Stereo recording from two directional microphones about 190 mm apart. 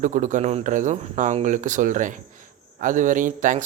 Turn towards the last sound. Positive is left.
turn(degrees=-45)  # may be behind; listen again after turning